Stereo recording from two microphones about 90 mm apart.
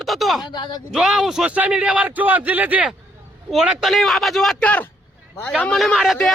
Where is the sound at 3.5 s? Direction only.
Centre (ahead or behind).